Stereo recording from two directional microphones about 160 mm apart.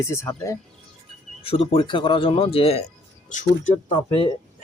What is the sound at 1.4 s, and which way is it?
Speech, 35° left (ahead or behind).